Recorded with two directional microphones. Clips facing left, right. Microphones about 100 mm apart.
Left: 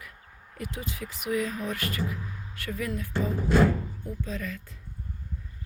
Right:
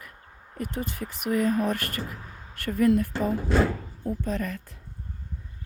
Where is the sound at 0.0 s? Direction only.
40° right (ahead or behind).